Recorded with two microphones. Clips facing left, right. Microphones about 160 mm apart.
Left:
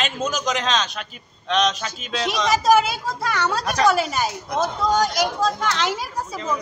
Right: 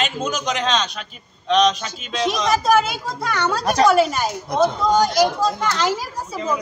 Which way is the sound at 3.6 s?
30° right (ahead or behind).